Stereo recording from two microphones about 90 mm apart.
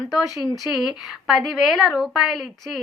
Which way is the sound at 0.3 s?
Centre (ahead or behind).